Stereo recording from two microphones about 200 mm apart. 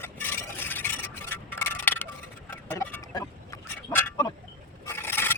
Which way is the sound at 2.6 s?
15° left (ahead or behind).